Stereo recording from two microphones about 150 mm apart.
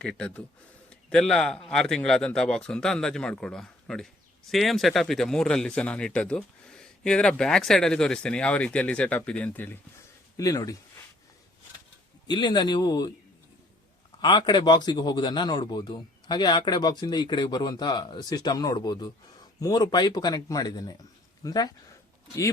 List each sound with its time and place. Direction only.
0.0 s a man's voice: 5° left (ahead or behind)
10.3 s a man's voice: 25° left (ahead or behind)
12.3 s a man's voice: 30° left (ahead or behind)
14.2 s a man's voice: 30° left (ahead or behind)